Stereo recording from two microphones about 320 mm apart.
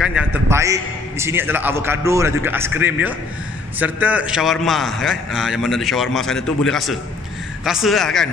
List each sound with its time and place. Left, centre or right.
0.0 s a man's voice: centre